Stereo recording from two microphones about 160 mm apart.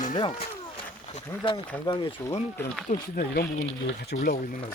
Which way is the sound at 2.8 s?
70° left (ahead or behind).